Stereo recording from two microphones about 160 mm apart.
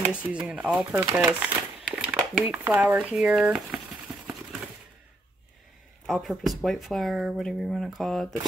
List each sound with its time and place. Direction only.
0.1 s speech: 5° right (ahead or behind)
6.0 s speech: centre (ahead or behind)